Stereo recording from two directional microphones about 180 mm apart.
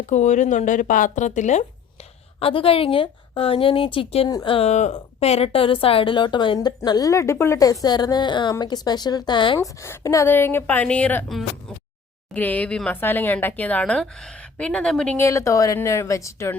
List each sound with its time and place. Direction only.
0.1 s speech: 40° left (ahead or behind)
2.4 s a woman's voice: 30° left (ahead or behind)
9.6 s speech: 15° left (ahead or behind)